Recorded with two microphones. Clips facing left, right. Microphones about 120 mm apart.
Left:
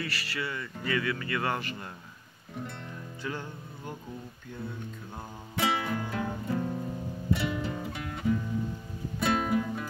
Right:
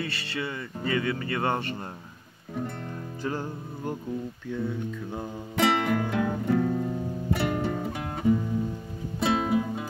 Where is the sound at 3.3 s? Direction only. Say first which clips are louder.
Right 6 dB; 40° right (ahead or behind).